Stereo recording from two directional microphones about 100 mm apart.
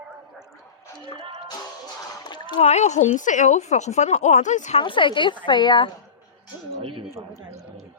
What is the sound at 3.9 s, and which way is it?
Speech, 90° left.